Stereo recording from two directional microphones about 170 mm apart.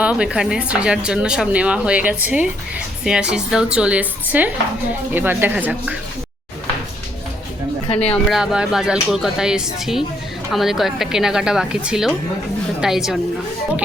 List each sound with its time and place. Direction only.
0.0 s speech: 5° right (ahead or behind)
7.9 s speech: 35° left (ahead or behind)
8.3 s a woman's voice: 5° right (ahead or behind)